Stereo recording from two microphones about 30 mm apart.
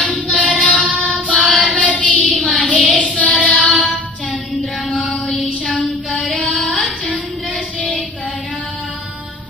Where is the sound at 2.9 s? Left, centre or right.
Left.